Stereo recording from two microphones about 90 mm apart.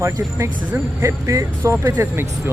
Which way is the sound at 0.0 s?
30° right (ahead or behind).